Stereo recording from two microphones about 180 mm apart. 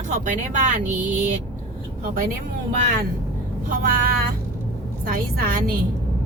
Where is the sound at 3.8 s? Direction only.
50° right (ahead or behind).